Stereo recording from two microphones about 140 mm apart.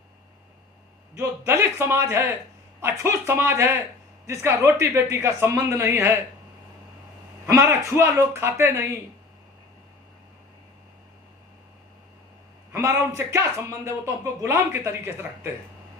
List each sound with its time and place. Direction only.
1.1 s a man's voice: 20° right (ahead or behind)
7.4 s a man's voice: 15° right (ahead or behind)
12.7 s a man's voice: 20° right (ahead or behind)